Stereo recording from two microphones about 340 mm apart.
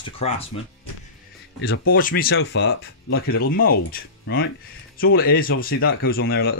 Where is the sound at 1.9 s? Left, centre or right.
Left.